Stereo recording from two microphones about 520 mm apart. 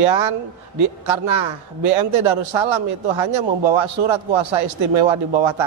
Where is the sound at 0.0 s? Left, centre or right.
Right.